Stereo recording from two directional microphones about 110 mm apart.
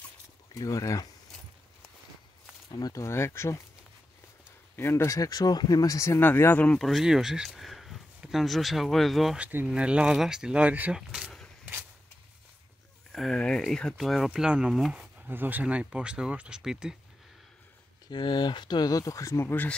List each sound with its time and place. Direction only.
0.6 s speech: 30° left (ahead or behind)
2.7 s speech: 35° left (ahead or behind)
4.7 s speech: 25° left (ahead or behind)
6.8 s speech: centre (ahead or behind)
9.4 s speech: 20° right (ahead or behind)
11.0 s vehicle: 5° right (ahead or behind)
13.1 s speech: 5° left (ahead or behind)
15.2 s speech: 20° right (ahead or behind)
18.1 s speech: 45° left (ahead or behind); by 19.7 s 20° left (ahead or behind)